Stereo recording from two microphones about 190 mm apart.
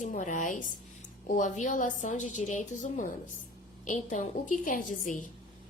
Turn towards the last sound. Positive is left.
turn(degrees=45)  # may be behind; listen again after turning